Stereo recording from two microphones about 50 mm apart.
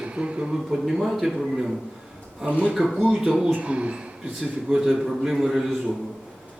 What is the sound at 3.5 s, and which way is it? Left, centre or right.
Speech, right.